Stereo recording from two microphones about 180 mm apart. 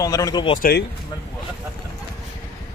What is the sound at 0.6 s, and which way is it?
Speech, 65° left (ahead or behind).